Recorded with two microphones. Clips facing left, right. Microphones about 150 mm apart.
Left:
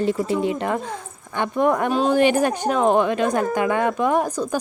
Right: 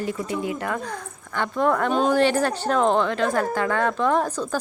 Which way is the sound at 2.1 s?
15° left (ahead or behind).